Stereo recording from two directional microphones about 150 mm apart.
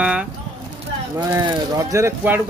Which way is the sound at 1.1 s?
25° right (ahead or behind).